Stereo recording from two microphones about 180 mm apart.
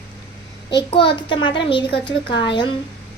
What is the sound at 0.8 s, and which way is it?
A child's voice, 30° left (ahead or behind).